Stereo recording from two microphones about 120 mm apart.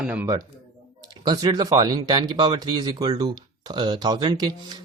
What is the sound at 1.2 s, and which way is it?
Speech, 35° right (ahead or behind).